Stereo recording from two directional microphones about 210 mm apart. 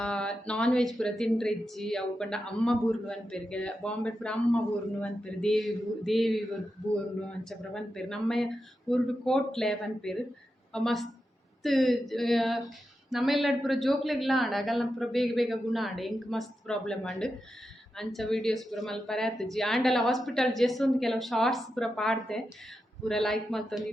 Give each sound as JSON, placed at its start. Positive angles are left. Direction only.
{"t": 0.0, "sound": "speech", "side_deg": 5}